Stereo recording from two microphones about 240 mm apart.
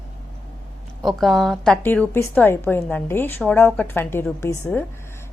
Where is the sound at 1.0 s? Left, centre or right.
Centre.